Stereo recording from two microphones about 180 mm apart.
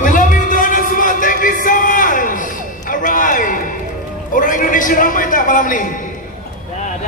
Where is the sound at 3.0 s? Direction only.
45° left (ahead or behind).